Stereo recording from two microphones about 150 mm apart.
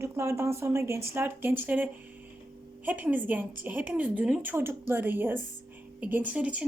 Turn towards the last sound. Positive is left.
turn(degrees=-10)  # may be behind; listen again after turning